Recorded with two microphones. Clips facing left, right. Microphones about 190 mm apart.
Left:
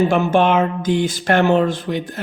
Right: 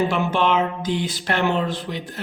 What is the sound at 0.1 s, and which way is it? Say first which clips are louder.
Speech: left 5 dB; 45° left (ahead or behind).